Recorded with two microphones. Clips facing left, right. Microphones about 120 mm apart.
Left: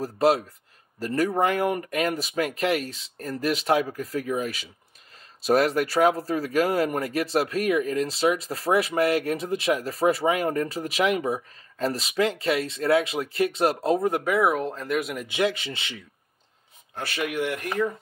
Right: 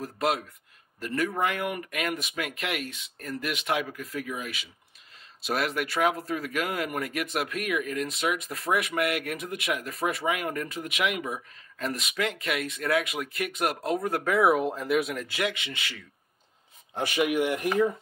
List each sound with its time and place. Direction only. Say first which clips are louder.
0.0 s speech: left 7 dB; 35° left (ahead or behind)
14.2 s speech: even; centre (ahead or behind)
15.1 s speech: left 4 dB; 20° left (ahead or behind)
15.4 s speech: left 6 dB; 35° left (ahead or behind)
16.9 s speech: right 3 dB; 15° right (ahead or behind)